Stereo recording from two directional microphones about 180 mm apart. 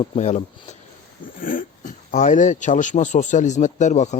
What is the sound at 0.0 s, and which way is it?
Speech, 40° left (ahead or behind).